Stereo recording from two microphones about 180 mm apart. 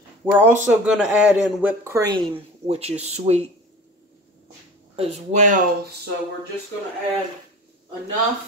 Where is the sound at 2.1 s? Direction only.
30° right (ahead or behind).